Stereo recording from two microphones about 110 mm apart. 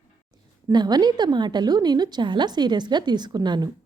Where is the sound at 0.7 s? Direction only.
40° right (ahead or behind).